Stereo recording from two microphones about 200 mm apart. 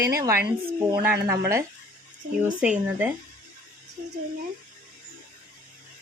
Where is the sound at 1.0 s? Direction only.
15° right (ahead or behind).